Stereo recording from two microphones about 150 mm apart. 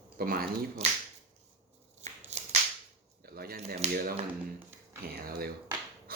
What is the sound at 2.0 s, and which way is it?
Shuffling cards, 50° right (ahead or behind).